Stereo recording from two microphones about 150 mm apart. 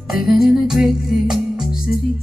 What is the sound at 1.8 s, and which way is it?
Music, 90° left.